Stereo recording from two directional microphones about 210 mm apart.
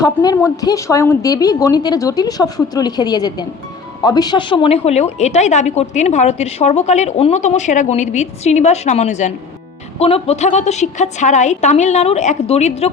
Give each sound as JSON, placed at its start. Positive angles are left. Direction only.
{"t": 0.0, "sound": "a woman's voice", "side_deg": 15}